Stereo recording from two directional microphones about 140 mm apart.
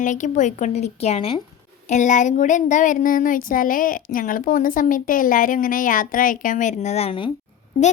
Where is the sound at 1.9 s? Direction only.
60° left (ahead or behind); by 7.3 s 40° left (ahead or behind).